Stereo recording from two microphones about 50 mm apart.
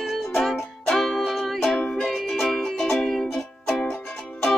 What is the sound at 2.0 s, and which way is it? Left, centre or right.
Music, centre.